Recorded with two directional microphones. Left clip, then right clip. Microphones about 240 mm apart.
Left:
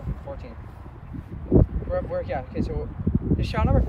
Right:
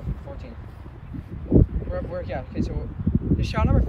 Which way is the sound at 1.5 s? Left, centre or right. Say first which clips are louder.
Even; right.